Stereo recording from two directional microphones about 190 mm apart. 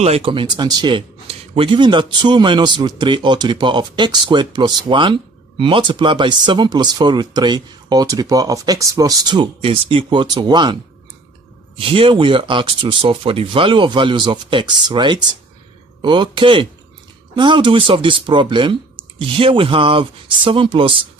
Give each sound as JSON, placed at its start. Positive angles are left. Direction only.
{"t": 0.0, "sound": "a man's voice", "side_deg": -30}
{"t": 11.8, "sound": "a man's voice", "side_deg": -30}